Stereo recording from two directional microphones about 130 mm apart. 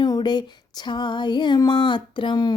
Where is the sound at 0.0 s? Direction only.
30° left (ahead or behind).